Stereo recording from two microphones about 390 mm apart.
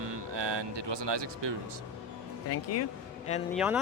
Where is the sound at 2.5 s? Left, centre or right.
Left.